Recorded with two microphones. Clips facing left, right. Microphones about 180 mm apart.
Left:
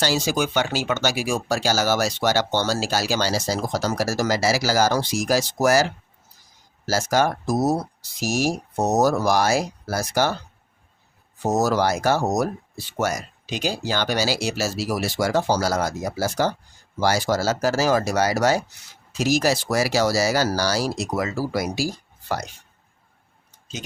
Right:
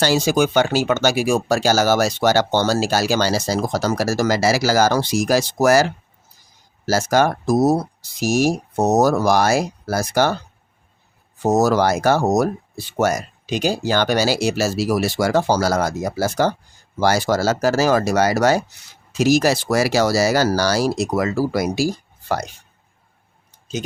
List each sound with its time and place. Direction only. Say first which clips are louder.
0.0 s speech: right 5 dB; 55° right (ahead or behind)
11.5 s speech: right 4 dB; 60° right (ahead or behind)